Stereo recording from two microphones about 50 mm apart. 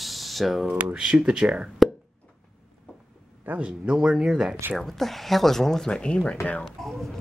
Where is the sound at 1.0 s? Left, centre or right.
Centre.